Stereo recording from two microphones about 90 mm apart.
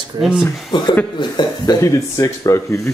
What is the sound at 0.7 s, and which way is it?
Speech, 60° left (ahead or behind).